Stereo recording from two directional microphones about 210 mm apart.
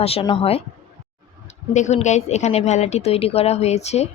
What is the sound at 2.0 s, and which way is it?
A woman's voice, 35° left (ahead or behind).